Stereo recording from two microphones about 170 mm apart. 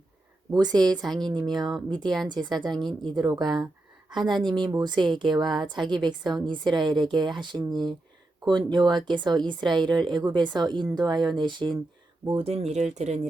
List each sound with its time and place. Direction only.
0.5 s a woman's voice: 25° right (ahead or behind)
0.8 s a woman's voice: 5° left (ahead or behind)
1.3 s a woman's voice: 25° right (ahead or behind); by 13.1 s 40° right (ahead or behind)